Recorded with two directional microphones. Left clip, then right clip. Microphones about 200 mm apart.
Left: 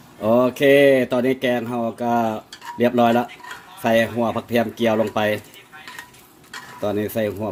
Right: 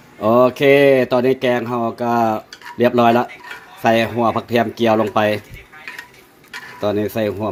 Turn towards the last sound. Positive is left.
turn(degrees=-20)  # may be behind; listen again after turning